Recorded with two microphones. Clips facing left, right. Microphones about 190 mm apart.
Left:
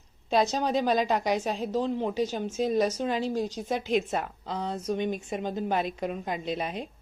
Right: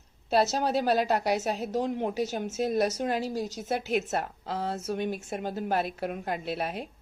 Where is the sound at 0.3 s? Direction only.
5° right (ahead or behind).